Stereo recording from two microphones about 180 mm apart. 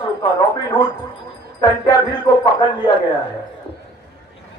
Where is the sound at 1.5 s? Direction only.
20° left (ahead or behind).